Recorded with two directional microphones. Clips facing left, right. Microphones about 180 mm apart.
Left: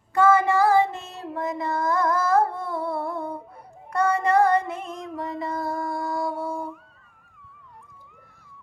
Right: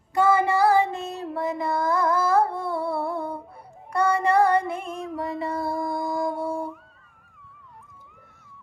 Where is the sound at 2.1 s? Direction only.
10° right (ahead or behind).